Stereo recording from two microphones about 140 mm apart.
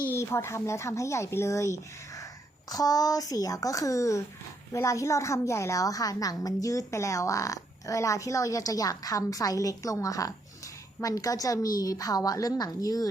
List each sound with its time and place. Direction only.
0.1 s a woman's voice: 20° left (ahead or behind)